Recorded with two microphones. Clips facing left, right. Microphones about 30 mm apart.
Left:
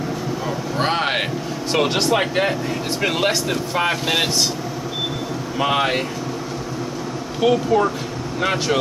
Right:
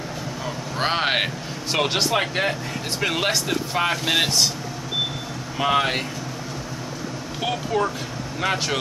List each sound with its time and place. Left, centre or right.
0.7 s speech: centre
5.6 s speech: centre
7.4 s speech: centre